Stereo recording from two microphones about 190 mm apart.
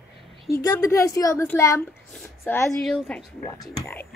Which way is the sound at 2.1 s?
5° left (ahead or behind).